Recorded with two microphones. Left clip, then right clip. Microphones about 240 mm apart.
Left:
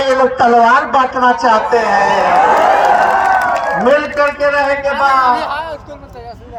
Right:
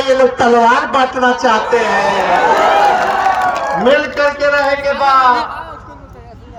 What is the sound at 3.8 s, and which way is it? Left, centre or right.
A man's voice, centre.